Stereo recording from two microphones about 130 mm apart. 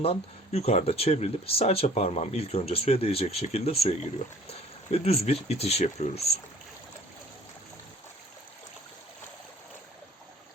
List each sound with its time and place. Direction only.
0.0 s speech: 50° left (ahead or behind)